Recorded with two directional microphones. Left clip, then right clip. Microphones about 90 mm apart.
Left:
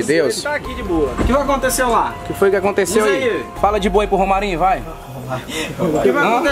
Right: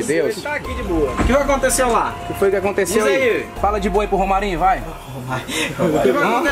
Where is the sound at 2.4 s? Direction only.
35° left (ahead or behind); by 4.8 s 15° left (ahead or behind).